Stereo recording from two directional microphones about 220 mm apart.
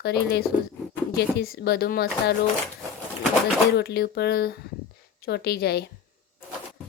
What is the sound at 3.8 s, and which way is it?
Speech, 45° left (ahead or behind).